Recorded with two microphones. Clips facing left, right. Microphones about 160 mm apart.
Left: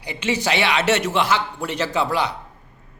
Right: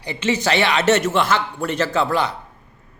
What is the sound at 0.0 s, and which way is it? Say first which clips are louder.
Speech: right 2 dB; 10° left (ahead or behind).